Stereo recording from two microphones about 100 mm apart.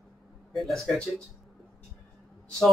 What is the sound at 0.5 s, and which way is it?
Speech, centre (ahead or behind).